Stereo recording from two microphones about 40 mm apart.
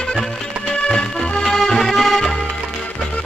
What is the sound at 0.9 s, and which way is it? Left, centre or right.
Music, left.